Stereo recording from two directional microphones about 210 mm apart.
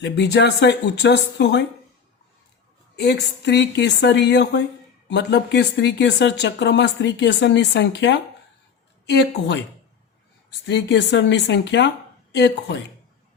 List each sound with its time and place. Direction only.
0.0 s speech: 55° left (ahead or behind)
2.9 s speech: 50° left (ahead or behind)
10.7 s speech: 55° left (ahead or behind)